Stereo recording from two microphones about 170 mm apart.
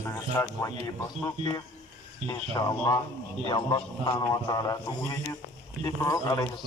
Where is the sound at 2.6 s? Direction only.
25° left (ahead or behind).